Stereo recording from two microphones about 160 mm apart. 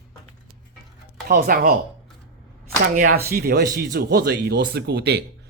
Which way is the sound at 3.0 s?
70° right (ahead or behind).